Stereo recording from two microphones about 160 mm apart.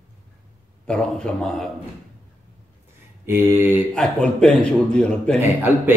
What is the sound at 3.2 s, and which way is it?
Speech, 15° right (ahead or behind).